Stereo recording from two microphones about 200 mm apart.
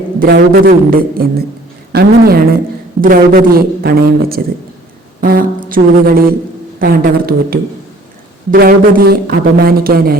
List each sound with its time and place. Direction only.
0.2 s speech: 50° right (ahead or behind)